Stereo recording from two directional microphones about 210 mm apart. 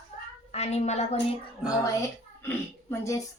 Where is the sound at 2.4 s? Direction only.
10° left (ahead or behind).